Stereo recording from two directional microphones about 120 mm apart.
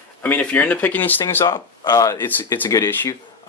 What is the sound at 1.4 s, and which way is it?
Speech, 35° left (ahead or behind).